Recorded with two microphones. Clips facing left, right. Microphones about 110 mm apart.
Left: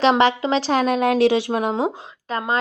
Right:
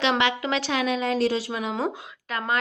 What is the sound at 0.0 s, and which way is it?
A woman's voice, 40° left (ahead or behind).